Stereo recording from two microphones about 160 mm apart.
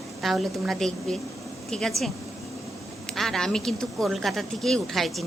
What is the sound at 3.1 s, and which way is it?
Speech, 5° left (ahead or behind).